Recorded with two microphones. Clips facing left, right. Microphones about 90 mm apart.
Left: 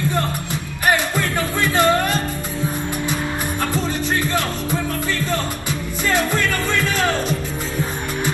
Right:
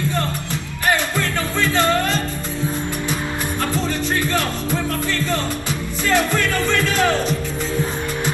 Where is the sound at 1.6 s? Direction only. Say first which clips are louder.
Left 1 dB; 15° left (ahead or behind).